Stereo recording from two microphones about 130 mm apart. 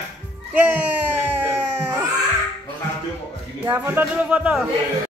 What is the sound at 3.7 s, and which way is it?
Speech, 15° right (ahead or behind).